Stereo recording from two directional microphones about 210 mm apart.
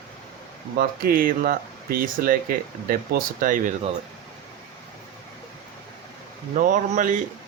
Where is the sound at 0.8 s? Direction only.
45° right (ahead or behind).